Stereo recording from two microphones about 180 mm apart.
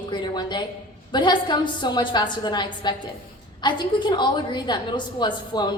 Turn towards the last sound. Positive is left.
turn(degrees=25)  # may be behind; listen again after turning